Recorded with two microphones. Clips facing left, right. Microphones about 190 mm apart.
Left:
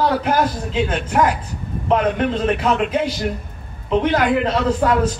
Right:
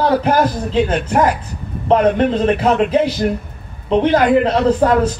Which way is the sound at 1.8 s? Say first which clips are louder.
Right 5 dB; 35° right (ahead or behind).